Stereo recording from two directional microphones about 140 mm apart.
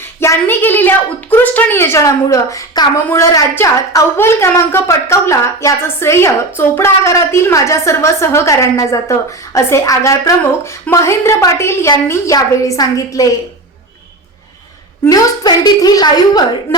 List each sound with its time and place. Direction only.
0.0 s a woman's voice: 15° left (ahead or behind)
15.0 s a woman's voice: 30° left (ahead or behind)